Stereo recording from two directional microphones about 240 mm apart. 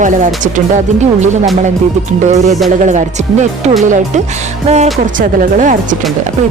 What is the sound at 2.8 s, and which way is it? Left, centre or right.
Speech, right.